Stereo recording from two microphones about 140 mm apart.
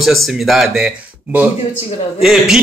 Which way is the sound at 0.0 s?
Centre (ahead or behind).